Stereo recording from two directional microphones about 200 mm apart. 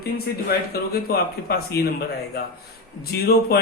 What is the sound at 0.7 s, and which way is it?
A man's voice, 50° left (ahead or behind).